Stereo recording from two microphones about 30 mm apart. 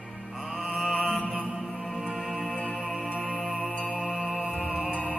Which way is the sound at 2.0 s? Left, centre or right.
Right.